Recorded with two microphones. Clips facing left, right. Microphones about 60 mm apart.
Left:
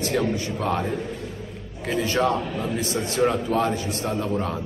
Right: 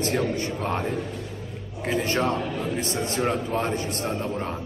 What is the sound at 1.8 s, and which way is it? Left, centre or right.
A man's voice, right.